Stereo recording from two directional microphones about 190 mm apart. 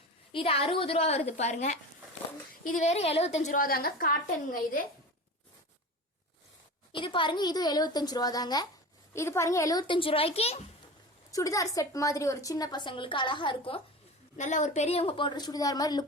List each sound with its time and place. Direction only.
0.3 s a woman's voice: 30° left (ahead or behind)
2.8 s a woman's voice: 35° left (ahead or behind)
6.9 s a woman's voice: 25° left (ahead or behind)
11.3 s a woman's voice: 15° left (ahead or behind)
14.3 s a woman's voice: 40° left (ahead or behind); by 16.0 s 20° left (ahead or behind)